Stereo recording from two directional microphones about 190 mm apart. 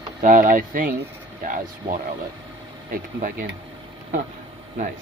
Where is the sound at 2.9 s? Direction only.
45° right (ahead or behind).